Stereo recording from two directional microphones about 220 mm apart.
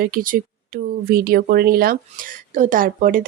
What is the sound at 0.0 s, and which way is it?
Speech, 40° right (ahead or behind).